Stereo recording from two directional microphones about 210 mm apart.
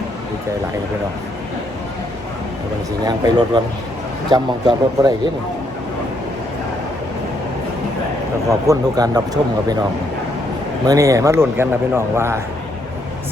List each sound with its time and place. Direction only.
3.1 s speech: 20° right (ahead or behind)
8.4 s a man's voice: 15° right (ahead or behind)
10.8 s a man's voice: 15° right (ahead or behind)